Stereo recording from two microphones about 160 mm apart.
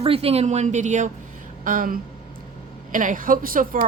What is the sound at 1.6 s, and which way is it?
Speech, 60° right (ahead or behind).